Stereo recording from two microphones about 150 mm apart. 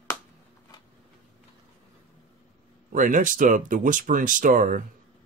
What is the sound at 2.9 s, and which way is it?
Speech, 60° right (ahead or behind).